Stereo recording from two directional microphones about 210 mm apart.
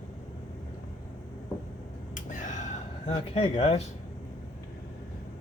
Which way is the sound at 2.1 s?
35° left (ahead or behind).